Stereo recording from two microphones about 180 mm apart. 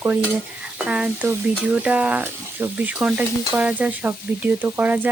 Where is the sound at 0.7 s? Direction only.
5° right (ahead or behind).